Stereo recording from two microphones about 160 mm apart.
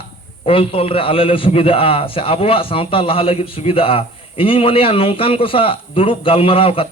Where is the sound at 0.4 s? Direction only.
35° left (ahead or behind).